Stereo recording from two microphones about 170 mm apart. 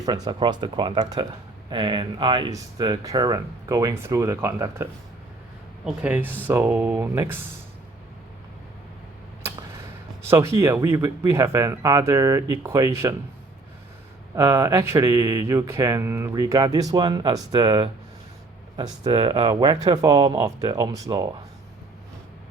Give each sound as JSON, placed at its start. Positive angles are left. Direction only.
{"t": 0.0, "sound": "speech", "side_deg": -30}
{"t": 10.2, "sound": "speech", "side_deg": -15}
{"t": 14.3, "sound": "speech", "side_deg": -20}